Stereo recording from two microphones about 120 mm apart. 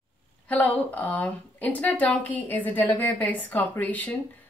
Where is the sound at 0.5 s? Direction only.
10° left (ahead or behind).